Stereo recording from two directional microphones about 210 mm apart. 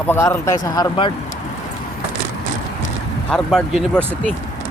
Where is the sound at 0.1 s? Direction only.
15° left (ahead or behind).